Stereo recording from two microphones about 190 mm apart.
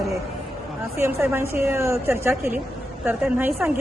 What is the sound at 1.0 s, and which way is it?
A woman's voice, 10° right (ahead or behind).